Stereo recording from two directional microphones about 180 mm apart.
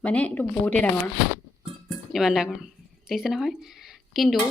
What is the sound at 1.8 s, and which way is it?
Music, centre (ahead or behind).